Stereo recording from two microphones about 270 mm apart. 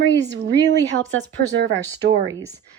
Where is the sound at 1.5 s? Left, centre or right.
Right.